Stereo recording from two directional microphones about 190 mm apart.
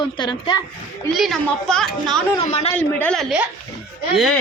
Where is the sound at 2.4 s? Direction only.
35° left (ahead or behind).